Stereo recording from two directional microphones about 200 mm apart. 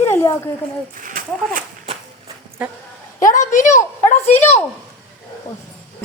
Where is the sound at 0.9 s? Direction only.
40° right (ahead or behind).